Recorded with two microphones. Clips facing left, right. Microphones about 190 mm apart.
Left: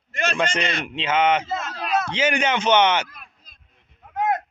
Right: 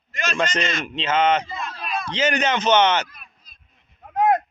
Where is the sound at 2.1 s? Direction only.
10° left (ahead or behind).